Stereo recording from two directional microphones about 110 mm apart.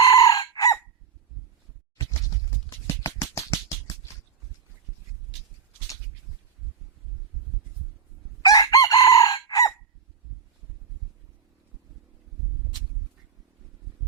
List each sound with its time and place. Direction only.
0.0 s chicken: 35° left (ahead or behind)
2.3 s a sound: 30° left (ahead or behind)
8.4 s chicken: 35° left (ahead or behind)